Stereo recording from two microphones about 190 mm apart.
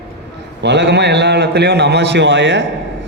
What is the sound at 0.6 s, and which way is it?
A man's voice, 65° right (ahead or behind).